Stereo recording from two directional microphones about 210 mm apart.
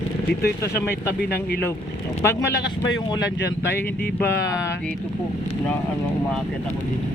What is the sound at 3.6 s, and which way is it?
Speech, 10° left (ahead or behind).